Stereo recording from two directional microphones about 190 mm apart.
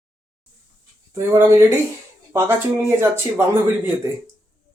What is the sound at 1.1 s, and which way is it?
Speech, 15° right (ahead or behind).